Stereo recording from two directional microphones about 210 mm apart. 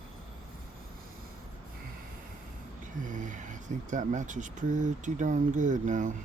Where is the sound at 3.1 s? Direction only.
35° right (ahead or behind).